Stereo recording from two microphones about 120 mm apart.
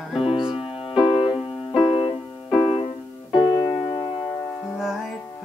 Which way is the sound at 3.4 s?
35° left (ahead or behind).